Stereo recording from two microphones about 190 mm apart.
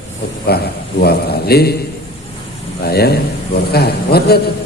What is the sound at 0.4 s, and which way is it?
A man's voice, 55° left (ahead or behind).